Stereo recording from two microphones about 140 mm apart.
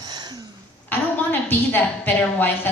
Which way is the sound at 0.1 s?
30° right (ahead or behind).